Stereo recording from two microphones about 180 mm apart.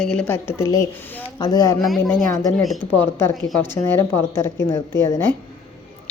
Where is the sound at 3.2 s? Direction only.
15° left (ahead or behind).